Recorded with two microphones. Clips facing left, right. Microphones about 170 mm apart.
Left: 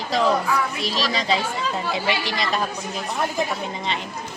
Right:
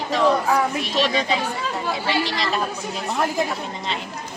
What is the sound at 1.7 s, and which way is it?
Speech, 20° left (ahead or behind).